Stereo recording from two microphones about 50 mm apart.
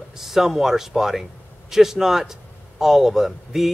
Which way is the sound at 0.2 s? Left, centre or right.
Centre.